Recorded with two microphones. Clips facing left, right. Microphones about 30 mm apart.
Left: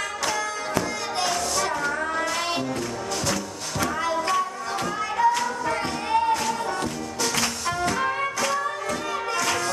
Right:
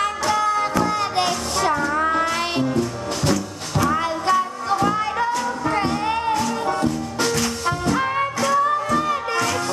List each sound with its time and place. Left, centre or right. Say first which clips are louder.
0.3 s music: right 8 dB; right; by 2.7 s centre
3.9 s music: right 3 dB; right
7.9 s music: right 4 dB; centre